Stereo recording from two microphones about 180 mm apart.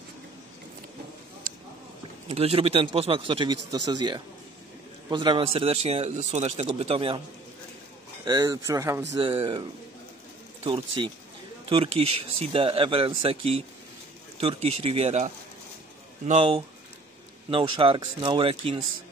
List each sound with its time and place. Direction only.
2.2 s speech: 35° right (ahead or behind)
8.3 s speech: 20° right (ahead or behind)
9.2 s speech: 30° right (ahead or behind)